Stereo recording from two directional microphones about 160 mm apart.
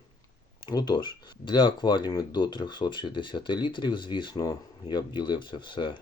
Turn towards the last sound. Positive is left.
turn(degrees=30)  # may be behind; listen again after turning